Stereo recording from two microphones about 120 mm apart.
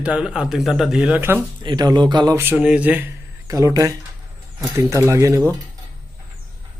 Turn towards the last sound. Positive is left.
turn(degrees=-25)  # may be behind; listen again after turning